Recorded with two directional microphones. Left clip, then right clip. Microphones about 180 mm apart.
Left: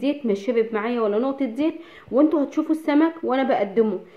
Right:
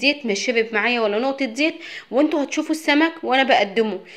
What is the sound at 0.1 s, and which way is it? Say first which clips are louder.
A woman's voice: right 2 dB; 10° right (ahead or behind).